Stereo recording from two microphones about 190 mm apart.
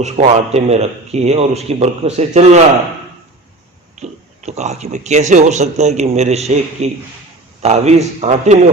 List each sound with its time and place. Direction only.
0.0 s speech: 35° right (ahead or behind)
4.0 s speech: 35° right (ahead or behind)